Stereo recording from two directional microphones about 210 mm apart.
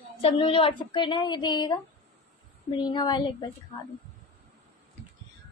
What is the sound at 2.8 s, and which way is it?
A woman's voice, 20° left (ahead or behind).